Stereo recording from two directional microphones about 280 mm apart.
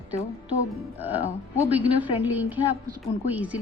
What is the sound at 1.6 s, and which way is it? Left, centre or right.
A woman's voice, centre.